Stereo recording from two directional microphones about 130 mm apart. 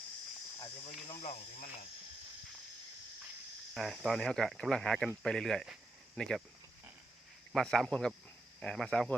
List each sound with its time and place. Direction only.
1.0 s speech: 50° left (ahead or behind)
3.8 s speech: centre (ahead or behind)
7.5 s speech: 5° left (ahead or behind)